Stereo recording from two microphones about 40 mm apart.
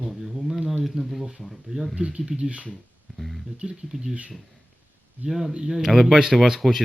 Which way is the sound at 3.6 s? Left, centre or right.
Right.